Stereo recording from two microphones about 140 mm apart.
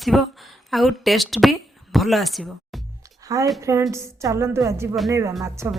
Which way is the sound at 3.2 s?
25° right (ahead or behind).